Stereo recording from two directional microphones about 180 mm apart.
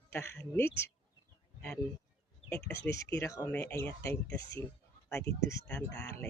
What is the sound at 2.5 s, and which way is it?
Speech, 15° left (ahead or behind).